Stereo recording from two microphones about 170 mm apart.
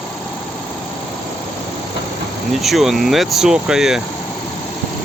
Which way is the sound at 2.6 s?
Centre (ahead or behind).